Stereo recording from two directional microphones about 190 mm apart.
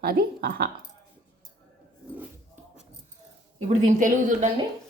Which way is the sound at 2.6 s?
10° right (ahead or behind).